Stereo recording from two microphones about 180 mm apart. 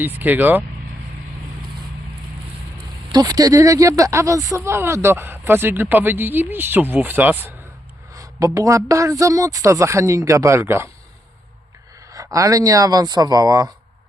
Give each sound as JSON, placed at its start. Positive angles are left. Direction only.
{"t": 0.0, "sound": "speech", "side_deg": -10}
{"t": 3.1, "sound": "speech", "side_deg": -20}
{"t": 12.1, "sound": "speech", "side_deg": -20}